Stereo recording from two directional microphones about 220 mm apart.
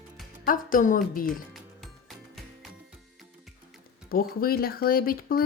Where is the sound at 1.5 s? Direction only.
Centre (ahead or behind).